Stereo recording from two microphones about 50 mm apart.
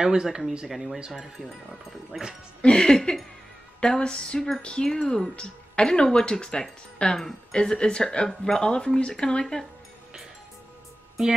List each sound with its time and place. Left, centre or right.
0.0 s speech: centre
2.1 s speech: centre
2.6 s speech: centre